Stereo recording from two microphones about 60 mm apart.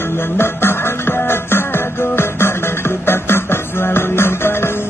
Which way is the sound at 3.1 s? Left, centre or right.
Left.